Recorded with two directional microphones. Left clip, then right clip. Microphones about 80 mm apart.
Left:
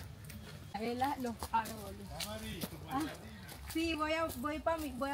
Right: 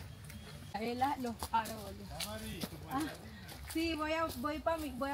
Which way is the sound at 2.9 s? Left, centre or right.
Centre.